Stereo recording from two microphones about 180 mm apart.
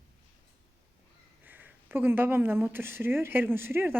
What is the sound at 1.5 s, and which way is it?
Speech, 10° right (ahead or behind).